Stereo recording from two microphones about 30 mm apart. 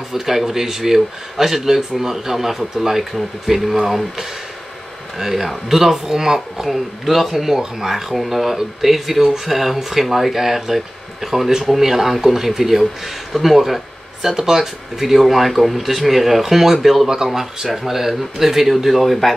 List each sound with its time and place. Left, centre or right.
0.1 s speech: centre
5.2 s speech: centre
6.7 s speech: centre
7.2 s speech: centre